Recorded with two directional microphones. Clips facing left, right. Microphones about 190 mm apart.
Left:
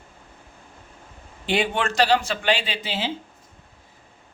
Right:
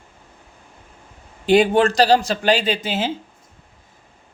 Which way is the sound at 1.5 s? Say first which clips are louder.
Right 9 dB; 40° right (ahead or behind).